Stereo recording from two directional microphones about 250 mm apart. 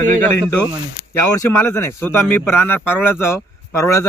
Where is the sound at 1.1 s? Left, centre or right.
Centre.